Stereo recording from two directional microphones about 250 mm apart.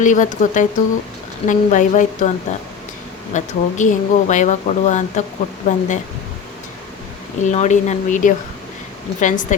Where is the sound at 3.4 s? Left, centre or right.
Left.